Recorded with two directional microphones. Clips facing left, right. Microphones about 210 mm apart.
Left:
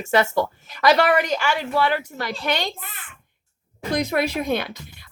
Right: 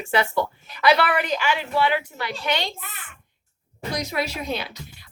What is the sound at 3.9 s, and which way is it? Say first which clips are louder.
Speech: left 6 dB; 55° left (ahead or behind).